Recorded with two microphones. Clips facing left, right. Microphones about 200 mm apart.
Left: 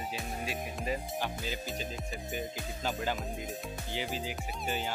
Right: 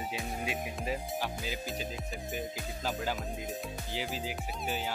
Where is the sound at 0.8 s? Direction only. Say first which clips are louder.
Left 1 dB; centre (ahead or behind).